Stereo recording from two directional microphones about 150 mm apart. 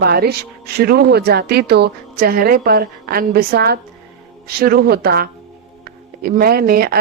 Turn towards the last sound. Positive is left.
turn(degrees=-90)